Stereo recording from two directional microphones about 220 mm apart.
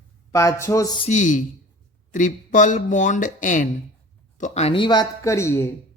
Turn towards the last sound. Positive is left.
turn(degrees=10)  # may be behind; listen again after turning